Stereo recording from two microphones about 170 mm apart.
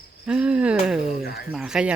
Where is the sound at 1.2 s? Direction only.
65° left (ahead or behind).